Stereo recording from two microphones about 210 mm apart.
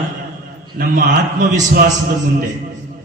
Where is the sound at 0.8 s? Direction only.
40° right (ahead or behind).